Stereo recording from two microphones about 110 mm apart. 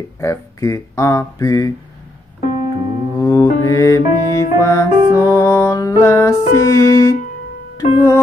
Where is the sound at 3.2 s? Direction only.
30° left (ahead or behind).